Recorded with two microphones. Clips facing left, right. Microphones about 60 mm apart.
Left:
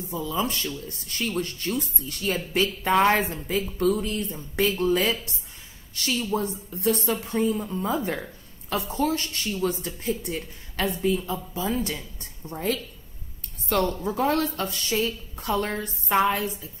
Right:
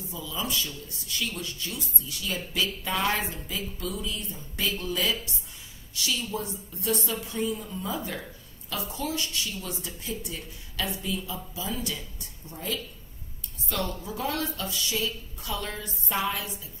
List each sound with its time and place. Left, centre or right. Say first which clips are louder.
0.1 s speech: left 5 dB; left
4.6 s speech: left 5 dB; left